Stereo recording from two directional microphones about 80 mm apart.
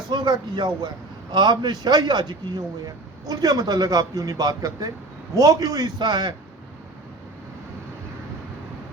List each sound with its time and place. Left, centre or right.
0.1 s a man's voice: right
2.8 s a man's voice: right